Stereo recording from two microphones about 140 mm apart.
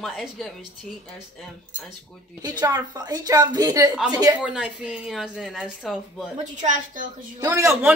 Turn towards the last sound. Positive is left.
turn(degrees=-20)  # may be behind; listen again after turning